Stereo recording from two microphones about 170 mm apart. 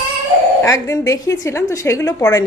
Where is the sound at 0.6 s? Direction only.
15° left (ahead or behind).